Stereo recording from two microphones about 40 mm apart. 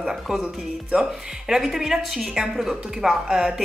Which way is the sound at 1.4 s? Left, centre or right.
Centre.